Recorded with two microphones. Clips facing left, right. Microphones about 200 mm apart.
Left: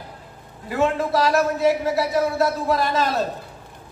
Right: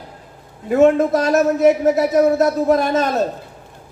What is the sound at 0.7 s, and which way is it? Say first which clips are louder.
Speech: right 7 dB; 50° right (ahead or behind).